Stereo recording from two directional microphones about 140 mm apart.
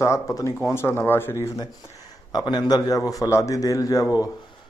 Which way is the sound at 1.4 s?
25° left (ahead or behind).